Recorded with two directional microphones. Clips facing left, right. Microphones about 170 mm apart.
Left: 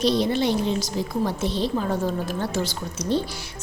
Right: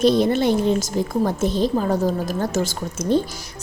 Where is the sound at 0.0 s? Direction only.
50° right (ahead or behind).